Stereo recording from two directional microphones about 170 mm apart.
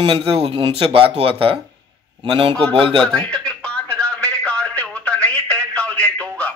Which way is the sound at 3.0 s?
5° left (ahead or behind).